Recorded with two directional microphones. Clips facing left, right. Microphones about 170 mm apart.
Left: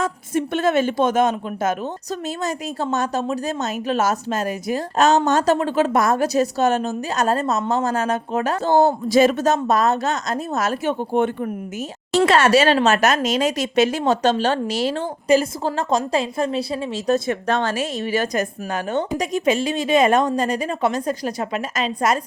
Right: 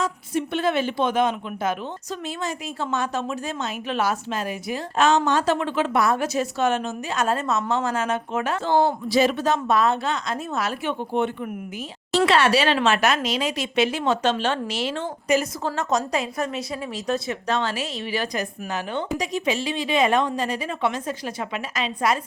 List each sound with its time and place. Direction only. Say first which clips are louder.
0.0 s speech: left 3 dB; 45° left (ahead or behind); by 17.0 s 30° left (ahead or behind)
17.1 s a woman's voice: left 5 dB; 50° left (ahead or behind)